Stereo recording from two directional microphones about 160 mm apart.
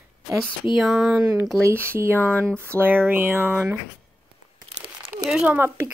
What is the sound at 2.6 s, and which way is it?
Speech, 15° right (ahead or behind).